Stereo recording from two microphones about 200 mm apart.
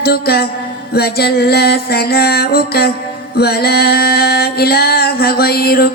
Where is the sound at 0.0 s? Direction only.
50° left (ahead or behind).